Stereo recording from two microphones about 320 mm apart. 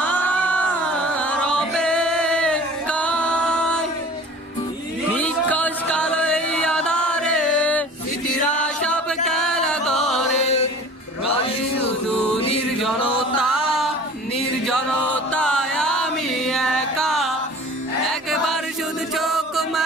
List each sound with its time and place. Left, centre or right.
0.0 s a sound: centre
1.1 s music: centre
5.1 s chant: centre
8.8 s music: centre
10.4 s music: centre
12.4 s music: centre
13.4 s music: centre
14.7 s chant: centre
19.1 s chant: centre